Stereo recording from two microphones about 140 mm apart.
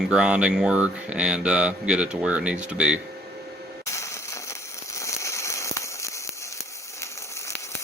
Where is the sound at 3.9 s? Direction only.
20° left (ahead or behind).